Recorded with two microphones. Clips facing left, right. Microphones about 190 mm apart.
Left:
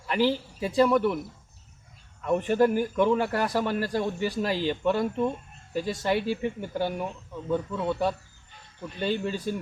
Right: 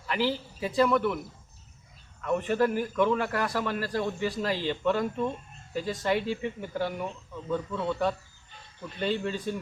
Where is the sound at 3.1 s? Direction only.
30° left (ahead or behind).